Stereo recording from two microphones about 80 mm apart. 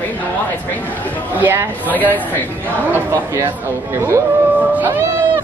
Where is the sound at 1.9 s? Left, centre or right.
Left.